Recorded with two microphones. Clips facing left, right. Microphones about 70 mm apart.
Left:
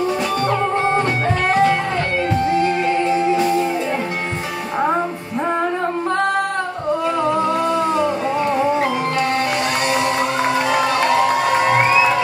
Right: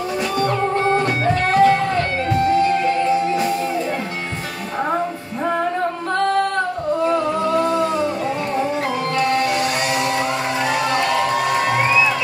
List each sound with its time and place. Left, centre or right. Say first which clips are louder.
0.5 s music: even; left
7.6 s music: left 1 dB; left